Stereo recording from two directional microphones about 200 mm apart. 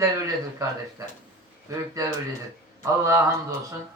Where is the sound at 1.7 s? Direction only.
15° right (ahead or behind).